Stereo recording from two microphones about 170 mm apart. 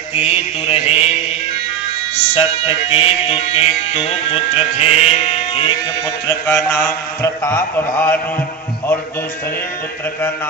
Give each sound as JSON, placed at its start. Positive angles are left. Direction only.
{"t": 0.1, "sound": "music", "side_deg": 35}
{"t": 2.1, "sound": "music", "side_deg": 35}
{"t": 6.2, "sound": "mantra", "side_deg": 15}